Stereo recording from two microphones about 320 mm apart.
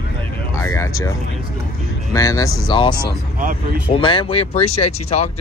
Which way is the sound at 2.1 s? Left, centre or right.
Centre.